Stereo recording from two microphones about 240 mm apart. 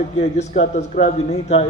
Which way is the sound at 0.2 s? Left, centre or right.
Left.